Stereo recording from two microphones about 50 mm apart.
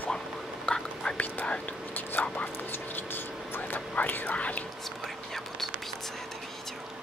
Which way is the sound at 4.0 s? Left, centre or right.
Left.